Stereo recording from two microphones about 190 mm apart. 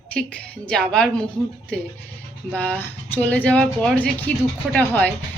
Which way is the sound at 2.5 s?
10° left (ahead or behind).